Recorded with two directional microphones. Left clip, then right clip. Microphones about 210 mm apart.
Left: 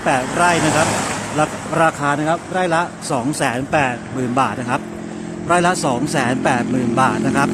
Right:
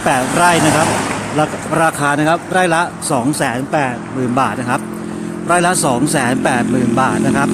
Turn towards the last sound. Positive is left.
turn(degrees=0)  # may be behind; listen again after turning